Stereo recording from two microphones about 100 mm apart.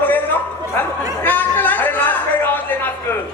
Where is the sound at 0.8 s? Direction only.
20° left (ahead or behind).